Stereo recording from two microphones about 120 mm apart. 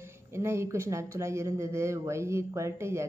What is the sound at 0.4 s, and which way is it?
Speech, 20° right (ahead or behind).